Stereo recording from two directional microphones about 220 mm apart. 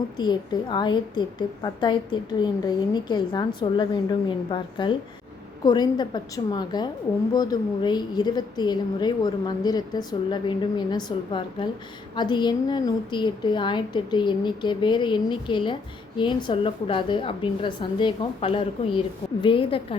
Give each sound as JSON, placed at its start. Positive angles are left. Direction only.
{"t": 0.2, "sound": "a woman's voice", "side_deg": 20}